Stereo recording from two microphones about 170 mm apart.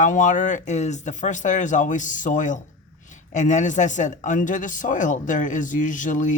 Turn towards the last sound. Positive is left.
turn(degrees=50)  # may be behind; listen again after turning